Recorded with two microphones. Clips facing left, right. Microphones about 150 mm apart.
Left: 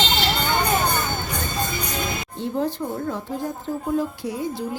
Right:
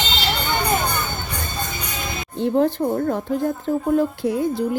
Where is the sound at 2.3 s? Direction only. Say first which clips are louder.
Right 8 dB; 65° right (ahead or behind).